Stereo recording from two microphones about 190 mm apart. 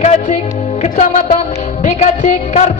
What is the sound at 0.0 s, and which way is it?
Music, 35° left (ahead or behind).